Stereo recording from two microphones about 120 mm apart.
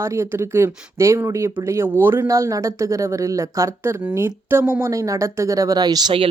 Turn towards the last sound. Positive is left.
turn(degrees=-35)  # may be behind; listen again after turning